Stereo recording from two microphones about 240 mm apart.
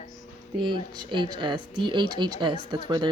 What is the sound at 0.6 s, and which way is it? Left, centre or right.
A woman's voice, centre.